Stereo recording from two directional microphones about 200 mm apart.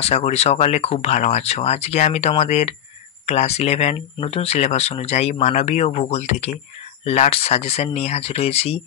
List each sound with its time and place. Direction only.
0.0 s speech: 30° left (ahead or behind)